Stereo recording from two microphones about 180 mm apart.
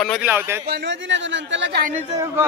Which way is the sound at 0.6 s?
70° right (ahead or behind).